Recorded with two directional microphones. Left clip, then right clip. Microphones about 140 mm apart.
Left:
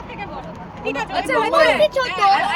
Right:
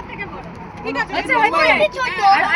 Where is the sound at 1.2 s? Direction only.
35° left (ahead or behind).